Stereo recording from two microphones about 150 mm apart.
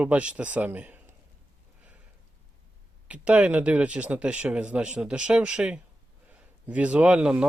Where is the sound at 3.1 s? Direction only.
10° right (ahead or behind).